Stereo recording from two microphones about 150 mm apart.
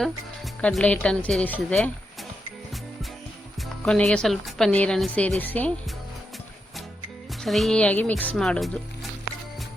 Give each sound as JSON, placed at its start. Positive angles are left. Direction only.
{"t": 0.6, "sound": "a woman's voice", "side_deg": 10}
{"t": 3.8, "sound": "a woman's voice", "side_deg": 5}
{"t": 7.4, "sound": "speech", "side_deg": 0}